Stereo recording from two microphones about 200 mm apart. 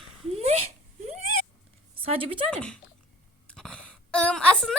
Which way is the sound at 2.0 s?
25° right (ahead or behind).